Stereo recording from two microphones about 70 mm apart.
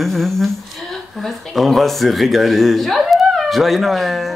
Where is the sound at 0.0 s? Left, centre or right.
Centre.